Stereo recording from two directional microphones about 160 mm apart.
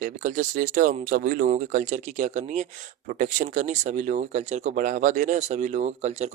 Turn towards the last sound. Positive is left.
turn(degrees=-45)  # may be behind; listen again after turning